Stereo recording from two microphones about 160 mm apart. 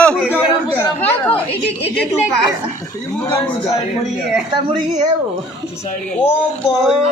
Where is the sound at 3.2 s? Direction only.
20° left (ahead or behind).